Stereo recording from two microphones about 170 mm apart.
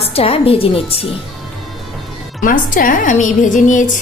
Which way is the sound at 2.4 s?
55° left (ahead or behind).